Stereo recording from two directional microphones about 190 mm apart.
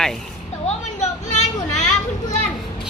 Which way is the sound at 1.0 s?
35° left (ahead or behind).